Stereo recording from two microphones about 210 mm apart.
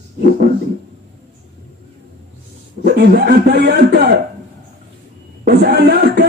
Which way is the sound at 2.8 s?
50° right (ahead or behind).